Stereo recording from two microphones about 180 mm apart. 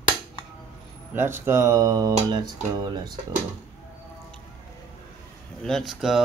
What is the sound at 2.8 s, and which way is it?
Speech, 25° right (ahead or behind).